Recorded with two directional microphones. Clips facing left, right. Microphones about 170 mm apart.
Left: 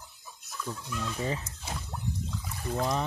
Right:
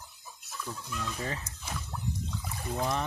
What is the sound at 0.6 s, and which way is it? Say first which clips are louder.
Speech: left 2 dB; 15° left (ahead or behind).